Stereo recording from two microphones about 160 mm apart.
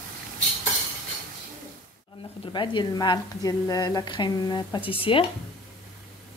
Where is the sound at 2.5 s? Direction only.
30° left (ahead or behind).